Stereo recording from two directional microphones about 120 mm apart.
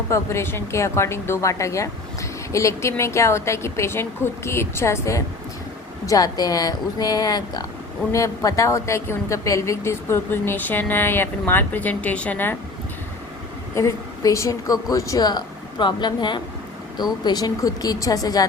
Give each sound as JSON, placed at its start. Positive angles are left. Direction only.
{"t": 0.1, "sound": "a woman's voice", "side_deg": 20}
{"t": 13.7, "sound": "a woman's voice", "side_deg": 25}